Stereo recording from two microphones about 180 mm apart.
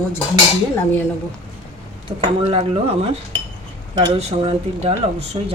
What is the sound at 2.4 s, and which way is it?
Speech, 35° right (ahead or behind).